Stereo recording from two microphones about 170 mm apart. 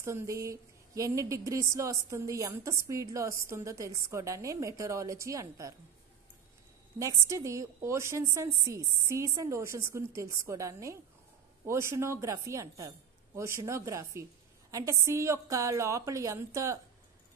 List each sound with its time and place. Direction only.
0.0 s a woman's voice: 15° right (ahead or behind)
7.0 s a woman's voice: 15° right (ahead or behind)